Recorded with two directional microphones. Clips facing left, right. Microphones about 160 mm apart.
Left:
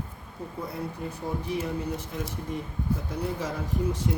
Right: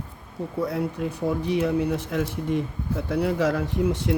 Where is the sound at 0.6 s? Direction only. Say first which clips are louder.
Right 8 dB; 90° right.